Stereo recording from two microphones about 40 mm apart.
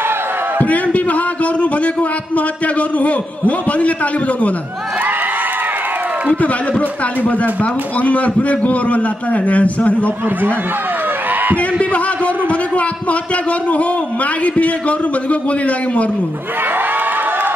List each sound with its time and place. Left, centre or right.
0.7 s a man's voice: left
8.0 s a man's voice: left
11.5 s a man's voice: left
12.4 s a sound: left
14.4 s a man's voice: left